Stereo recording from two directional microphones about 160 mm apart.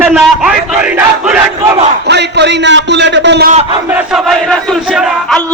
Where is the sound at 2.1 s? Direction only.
90° right.